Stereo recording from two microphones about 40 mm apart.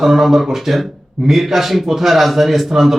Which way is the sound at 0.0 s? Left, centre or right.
Centre.